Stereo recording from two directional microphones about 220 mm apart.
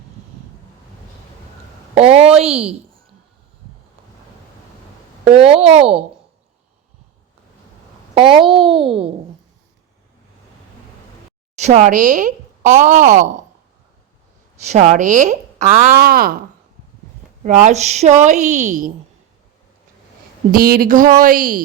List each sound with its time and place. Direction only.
2.0 s a woman's voice: 25° right (ahead or behind)
5.4 s a child's voice: 25° right (ahead or behind)
8.1 s a child's voice: 25° right (ahead or behind)
11.5 s speech: 30° right (ahead or behind)
14.7 s speech: 30° right (ahead or behind)
17.4 s speech: 35° right (ahead or behind)
20.5 s speech: 40° right (ahead or behind)